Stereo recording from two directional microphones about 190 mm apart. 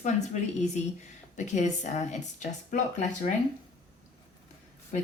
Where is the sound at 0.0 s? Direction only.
40° left (ahead or behind).